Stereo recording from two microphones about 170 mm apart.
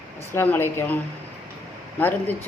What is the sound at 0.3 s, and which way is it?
Speech, 10° left (ahead or behind).